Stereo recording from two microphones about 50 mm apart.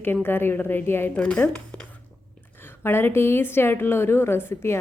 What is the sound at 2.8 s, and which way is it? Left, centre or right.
A woman's voice, left.